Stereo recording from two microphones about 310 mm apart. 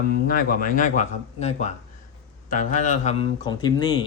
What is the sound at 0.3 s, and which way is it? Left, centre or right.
A man's voice, left.